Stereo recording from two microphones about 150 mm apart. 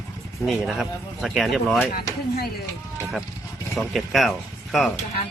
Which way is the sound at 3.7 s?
Centre (ahead or behind).